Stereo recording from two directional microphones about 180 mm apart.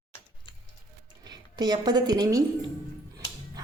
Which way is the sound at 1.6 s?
25° right (ahead or behind).